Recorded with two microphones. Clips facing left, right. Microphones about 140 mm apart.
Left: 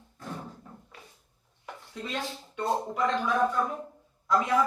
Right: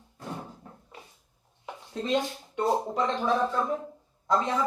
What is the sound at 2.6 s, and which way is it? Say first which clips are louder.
A man's voice: right 2 dB; 25° right (ahead or behind).